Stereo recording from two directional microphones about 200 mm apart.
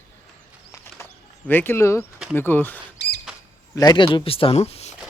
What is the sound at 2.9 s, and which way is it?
Rodents, 55° left (ahead or behind).